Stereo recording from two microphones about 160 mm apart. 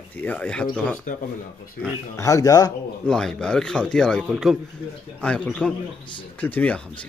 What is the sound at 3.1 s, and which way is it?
Speech, 5° left (ahead or behind).